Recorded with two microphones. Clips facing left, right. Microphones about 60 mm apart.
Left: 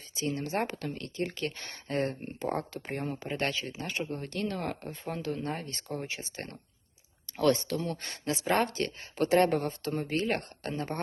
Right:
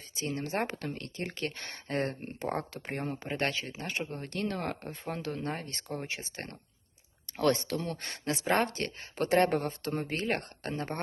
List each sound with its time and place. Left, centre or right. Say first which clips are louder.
0.1 s speech: left 2 dB; right
3.3 s speech: even; right